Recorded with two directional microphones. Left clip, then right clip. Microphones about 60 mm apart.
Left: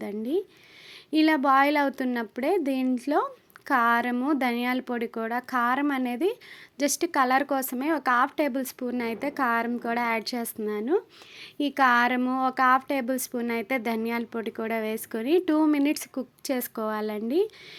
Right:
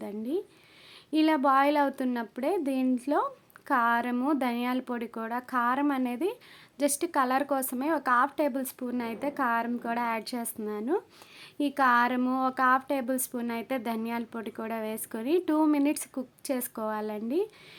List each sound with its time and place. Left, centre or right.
0.0 s a sound: left
1.1 s speech: left
13.5 s speech: left